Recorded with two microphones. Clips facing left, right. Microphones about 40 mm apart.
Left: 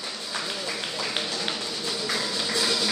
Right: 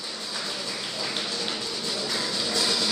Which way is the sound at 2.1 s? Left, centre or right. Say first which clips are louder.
Left 1 dB; centre.